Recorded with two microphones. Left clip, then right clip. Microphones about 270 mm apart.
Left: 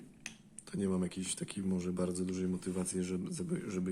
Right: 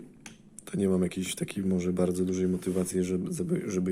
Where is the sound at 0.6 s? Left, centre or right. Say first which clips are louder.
Right 9 dB; centre.